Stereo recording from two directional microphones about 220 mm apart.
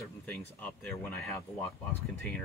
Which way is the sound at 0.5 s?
5° left (ahead or behind).